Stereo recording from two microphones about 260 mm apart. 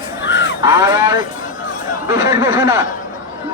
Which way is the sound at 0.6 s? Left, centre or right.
Centre.